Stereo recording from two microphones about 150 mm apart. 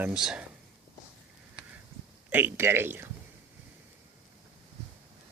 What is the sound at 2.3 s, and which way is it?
Speech, 15° right (ahead or behind).